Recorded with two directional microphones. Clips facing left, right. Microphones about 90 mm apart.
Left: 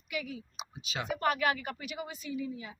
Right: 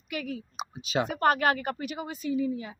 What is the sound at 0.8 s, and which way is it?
Speech, 35° right (ahead or behind).